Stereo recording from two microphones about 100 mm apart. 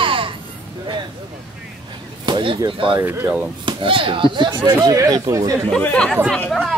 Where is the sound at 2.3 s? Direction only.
60° right (ahead or behind).